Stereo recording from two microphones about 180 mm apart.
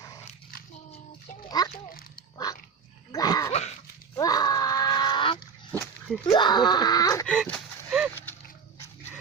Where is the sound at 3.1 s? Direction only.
20° left (ahead or behind).